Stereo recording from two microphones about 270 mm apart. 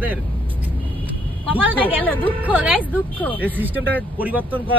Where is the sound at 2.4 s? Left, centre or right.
Centre.